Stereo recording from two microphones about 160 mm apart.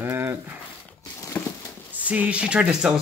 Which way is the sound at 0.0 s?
15° right (ahead or behind).